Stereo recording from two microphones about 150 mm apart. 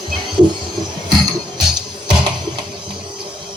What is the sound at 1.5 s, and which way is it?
Music, 30° right (ahead or behind).